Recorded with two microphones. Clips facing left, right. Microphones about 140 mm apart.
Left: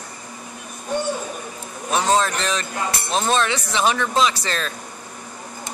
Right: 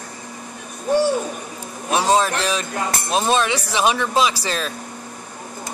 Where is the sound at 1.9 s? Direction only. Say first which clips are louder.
Right 2 dB; 15° right (ahead or behind).